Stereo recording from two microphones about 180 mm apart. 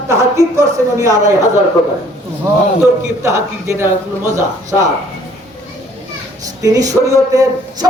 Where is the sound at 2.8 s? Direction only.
15° right (ahead or behind).